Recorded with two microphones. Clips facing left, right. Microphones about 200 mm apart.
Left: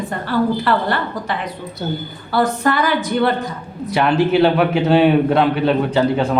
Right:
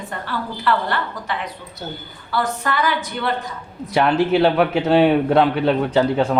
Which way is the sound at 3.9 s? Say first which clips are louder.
Left 2 dB; 5° left (ahead or behind).